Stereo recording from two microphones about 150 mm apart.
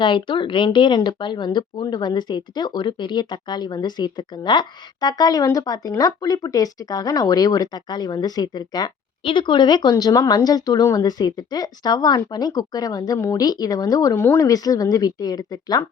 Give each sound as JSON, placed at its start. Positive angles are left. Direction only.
{"t": 0.0, "sound": "a woman's voice", "side_deg": 30}